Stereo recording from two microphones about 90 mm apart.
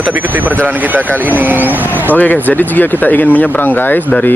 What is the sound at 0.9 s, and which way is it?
Speech, 20° right (ahead or behind).